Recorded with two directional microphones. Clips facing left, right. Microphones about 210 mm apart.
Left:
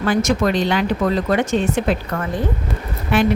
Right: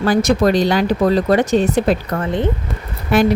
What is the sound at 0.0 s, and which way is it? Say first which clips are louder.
A woman's voice: right 3 dB; 35° right (ahead or behind).